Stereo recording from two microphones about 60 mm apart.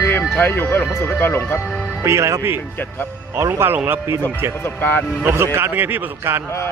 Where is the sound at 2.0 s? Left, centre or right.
Right.